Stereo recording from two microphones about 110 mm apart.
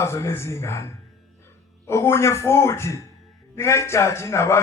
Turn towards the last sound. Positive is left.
turn(degrees=25)  # may be behind; listen again after turning